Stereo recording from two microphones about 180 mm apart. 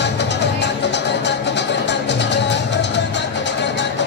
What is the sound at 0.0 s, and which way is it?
Music, 75° left (ahead or behind).